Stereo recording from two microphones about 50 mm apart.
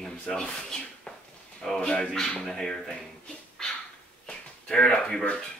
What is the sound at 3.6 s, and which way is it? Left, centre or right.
Dog, centre.